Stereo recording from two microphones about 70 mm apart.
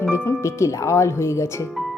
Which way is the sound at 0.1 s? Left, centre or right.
Left.